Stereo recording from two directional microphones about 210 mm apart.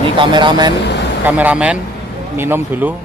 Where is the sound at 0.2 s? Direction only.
20° right (ahead or behind).